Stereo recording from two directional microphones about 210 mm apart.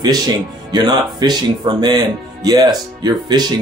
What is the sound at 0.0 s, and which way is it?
Speech, 20° right (ahead or behind).